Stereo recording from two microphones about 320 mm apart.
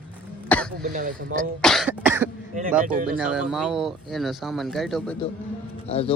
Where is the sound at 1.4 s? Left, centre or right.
Centre.